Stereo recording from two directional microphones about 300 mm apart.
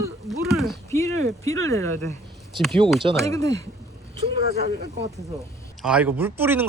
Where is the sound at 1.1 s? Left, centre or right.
Right.